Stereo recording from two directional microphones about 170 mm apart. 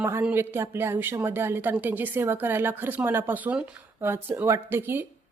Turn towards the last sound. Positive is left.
turn(degrees=-15)  # may be behind; listen again after turning